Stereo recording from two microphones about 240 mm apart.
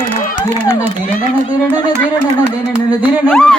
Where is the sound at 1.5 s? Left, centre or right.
Centre.